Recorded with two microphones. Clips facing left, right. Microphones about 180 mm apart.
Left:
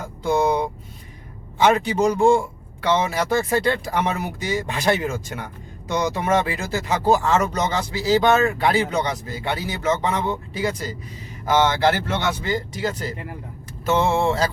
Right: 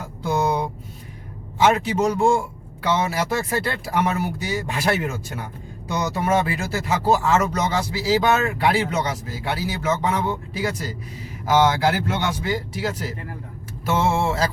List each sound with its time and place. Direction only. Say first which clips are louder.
0.3 s speech: left 2 dB; 5° right (ahead or behind)